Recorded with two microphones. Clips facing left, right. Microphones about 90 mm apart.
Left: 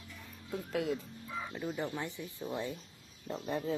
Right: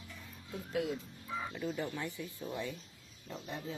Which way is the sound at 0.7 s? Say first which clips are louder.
Left 1 dB; 60° left (ahead or behind).